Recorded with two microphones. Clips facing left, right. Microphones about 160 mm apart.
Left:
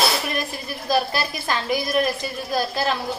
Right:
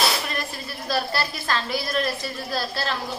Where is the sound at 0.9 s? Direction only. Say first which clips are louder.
Left 4 dB; 15° left (ahead or behind).